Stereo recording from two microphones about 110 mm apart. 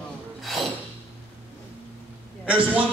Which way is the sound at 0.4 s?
Centre (ahead or behind).